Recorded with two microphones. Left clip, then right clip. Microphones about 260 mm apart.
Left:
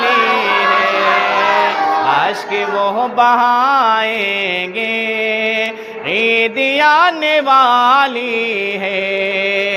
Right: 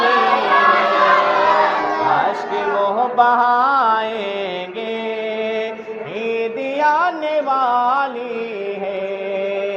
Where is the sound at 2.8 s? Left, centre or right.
Left.